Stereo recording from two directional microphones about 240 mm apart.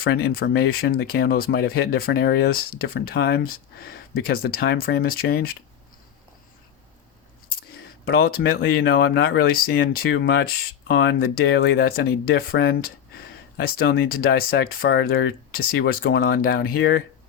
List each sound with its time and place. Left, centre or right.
0.0 s speech: left
8.0 s speech: left